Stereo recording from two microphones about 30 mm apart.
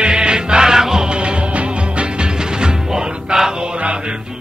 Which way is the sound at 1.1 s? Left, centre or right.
Right.